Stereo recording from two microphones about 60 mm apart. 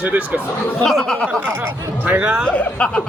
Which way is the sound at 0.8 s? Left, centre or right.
Centre.